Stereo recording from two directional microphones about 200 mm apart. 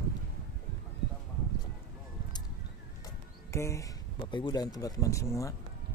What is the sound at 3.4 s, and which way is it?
Speech, 15° left (ahead or behind).